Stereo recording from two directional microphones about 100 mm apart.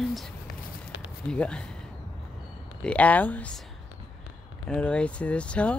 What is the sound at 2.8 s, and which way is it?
Speech, 15° left (ahead or behind).